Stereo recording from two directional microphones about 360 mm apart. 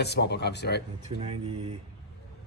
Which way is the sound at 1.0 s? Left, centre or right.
Centre.